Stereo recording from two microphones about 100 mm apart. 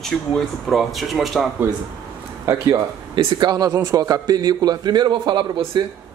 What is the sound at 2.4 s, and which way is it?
Speech, 35° right (ahead or behind).